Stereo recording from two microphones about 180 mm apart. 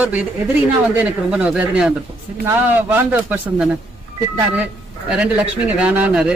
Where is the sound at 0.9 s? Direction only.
5° right (ahead or behind).